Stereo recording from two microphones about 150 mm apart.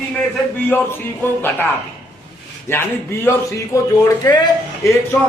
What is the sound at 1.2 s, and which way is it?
Speech, 15° left (ahead or behind).